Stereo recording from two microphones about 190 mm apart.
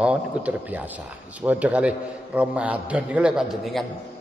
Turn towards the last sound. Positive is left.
turn(degrees=0)  # may be behind; listen again after turning